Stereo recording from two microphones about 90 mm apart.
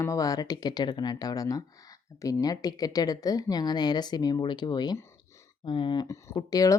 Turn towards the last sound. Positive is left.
turn(degrees=40)  # may be behind; listen again after turning